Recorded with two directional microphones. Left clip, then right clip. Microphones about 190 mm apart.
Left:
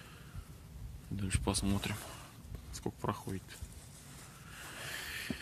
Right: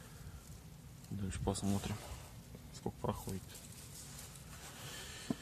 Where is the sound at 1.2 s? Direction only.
15° left (ahead or behind).